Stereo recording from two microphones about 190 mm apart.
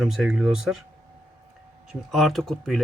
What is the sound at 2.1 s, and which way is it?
Speech, centre (ahead or behind).